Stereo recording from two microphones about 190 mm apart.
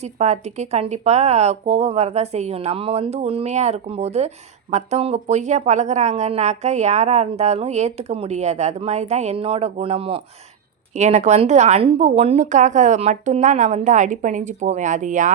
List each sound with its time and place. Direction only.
0.0 s speech: 35° right (ahead or behind)